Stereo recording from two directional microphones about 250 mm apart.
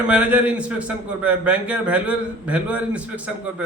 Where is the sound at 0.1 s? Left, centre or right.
Centre.